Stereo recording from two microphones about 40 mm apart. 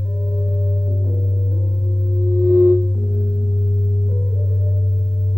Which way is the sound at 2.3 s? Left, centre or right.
Right.